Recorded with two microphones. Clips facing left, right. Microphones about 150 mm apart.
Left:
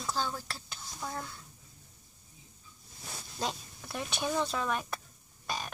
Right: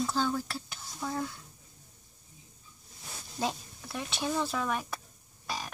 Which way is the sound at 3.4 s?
5° right (ahead or behind).